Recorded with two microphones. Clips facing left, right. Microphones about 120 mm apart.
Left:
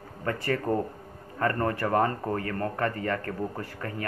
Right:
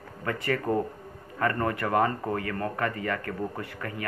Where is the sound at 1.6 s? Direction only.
30° left (ahead or behind).